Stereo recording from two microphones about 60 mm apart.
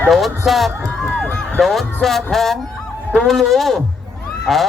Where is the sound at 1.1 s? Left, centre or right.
Centre.